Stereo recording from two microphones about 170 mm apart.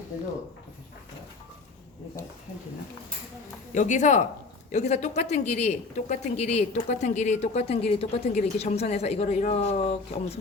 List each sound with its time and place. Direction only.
3.8 s speech: 45° left (ahead or behind)